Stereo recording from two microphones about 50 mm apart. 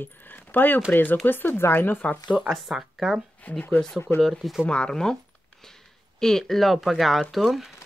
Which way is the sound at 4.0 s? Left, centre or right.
Left.